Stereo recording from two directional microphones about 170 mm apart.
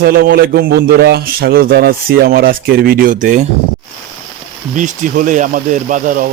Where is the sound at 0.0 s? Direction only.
60° right (ahead or behind).